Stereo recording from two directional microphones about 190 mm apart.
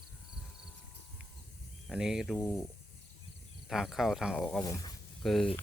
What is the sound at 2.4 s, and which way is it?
Speech, 15° left (ahead or behind).